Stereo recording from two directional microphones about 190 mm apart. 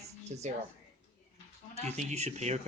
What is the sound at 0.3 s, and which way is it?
Speech, 40° right (ahead or behind).